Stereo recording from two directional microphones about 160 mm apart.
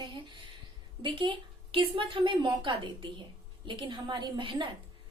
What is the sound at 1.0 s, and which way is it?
A woman's voice, 30° right (ahead or behind).